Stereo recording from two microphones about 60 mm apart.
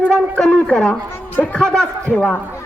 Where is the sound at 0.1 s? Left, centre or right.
Centre.